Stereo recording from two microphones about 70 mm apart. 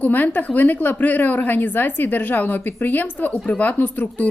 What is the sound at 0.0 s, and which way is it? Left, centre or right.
A woman's voice, left.